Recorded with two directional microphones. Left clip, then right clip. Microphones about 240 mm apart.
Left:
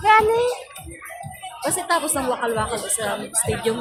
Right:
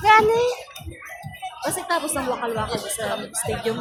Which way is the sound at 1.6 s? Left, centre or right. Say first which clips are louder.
Left 3 dB; centre.